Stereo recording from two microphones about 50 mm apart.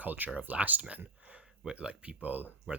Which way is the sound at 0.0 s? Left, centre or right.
Right.